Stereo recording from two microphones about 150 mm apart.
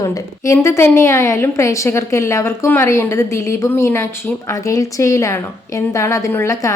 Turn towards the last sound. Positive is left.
turn(degrees=20)  # may be behind; listen again after turning